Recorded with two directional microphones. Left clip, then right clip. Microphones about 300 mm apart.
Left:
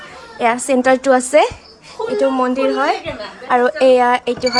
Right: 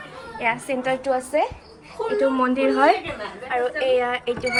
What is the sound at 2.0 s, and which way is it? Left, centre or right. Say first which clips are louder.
A woman's voice: left 5 dB; centre.